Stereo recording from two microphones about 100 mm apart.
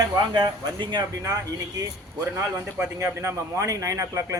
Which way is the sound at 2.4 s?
15° right (ahead or behind).